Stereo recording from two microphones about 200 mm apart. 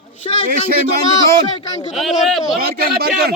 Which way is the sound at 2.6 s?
50° right (ahead or behind).